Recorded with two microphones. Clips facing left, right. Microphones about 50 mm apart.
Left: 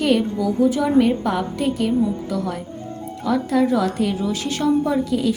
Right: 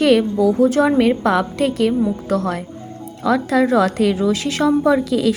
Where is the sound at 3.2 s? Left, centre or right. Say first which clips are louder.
Right 3 dB; right.